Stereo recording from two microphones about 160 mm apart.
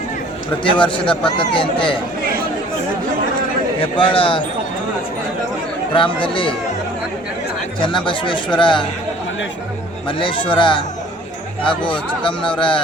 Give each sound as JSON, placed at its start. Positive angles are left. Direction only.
{"t": 0.6, "sound": "speech", "side_deg": 30}
{"t": 3.8, "sound": "speech", "side_deg": 30}
{"t": 5.9, "sound": "speech", "side_deg": 30}
{"t": 7.8, "sound": "speech", "side_deg": 30}
{"t": 10.1, "sound": "speech", "side_deg": 30}